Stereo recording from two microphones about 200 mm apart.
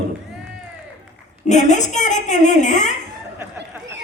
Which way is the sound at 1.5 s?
35° left (ahead or behind).